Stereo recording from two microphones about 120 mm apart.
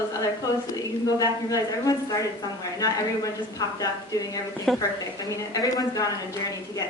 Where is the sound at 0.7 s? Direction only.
30° left (ahead or behind).